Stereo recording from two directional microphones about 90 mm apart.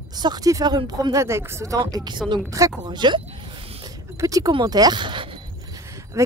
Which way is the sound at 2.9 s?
55° right (ahead or behind).